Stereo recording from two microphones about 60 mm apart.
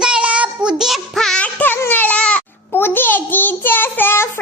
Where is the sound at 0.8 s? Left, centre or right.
Centre.